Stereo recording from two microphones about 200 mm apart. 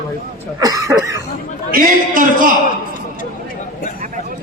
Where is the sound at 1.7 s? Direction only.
45° right (ahead or behind).